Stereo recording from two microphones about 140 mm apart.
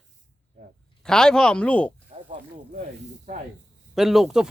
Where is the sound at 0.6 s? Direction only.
65° right (ahead or behind).